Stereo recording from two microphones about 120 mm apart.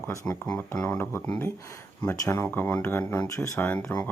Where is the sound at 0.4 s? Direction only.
10° left (ahead or behind).